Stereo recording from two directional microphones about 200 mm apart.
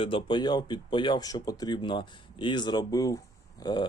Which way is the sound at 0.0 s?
25° left (ahead or behind).